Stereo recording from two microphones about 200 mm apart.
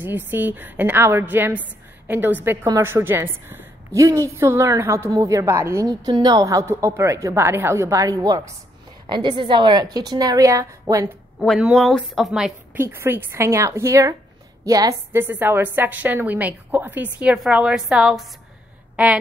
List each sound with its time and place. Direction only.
0.0 s a woman's voice: 10° right (ahead or behind)
11.3 s a woman's voice: centre (ahead or behind)